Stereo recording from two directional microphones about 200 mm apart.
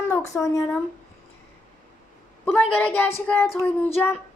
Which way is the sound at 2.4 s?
5° left (ahead or behind).